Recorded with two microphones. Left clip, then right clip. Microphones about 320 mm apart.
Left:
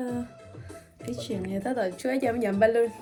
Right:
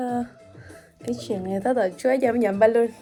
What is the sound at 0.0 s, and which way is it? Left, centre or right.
Music, centre.